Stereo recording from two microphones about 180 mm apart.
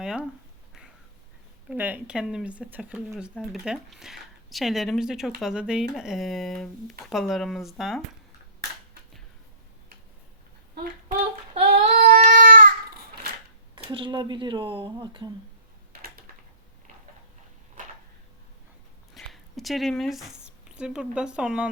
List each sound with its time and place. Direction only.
0.0 s speech: 5° right (ahead or behind)
1.7 s speech: 10° right (ahead or behind)
11.5 s singing: 40° right (ahead or behind)
11.9 s child singing: 60° right (ahead or behind)
13.9 s speech: 25° right (ahead or behind)
15.9 s a sound: 55° right (ahead or behind)
19.1 s speech: centre (ahead or behind)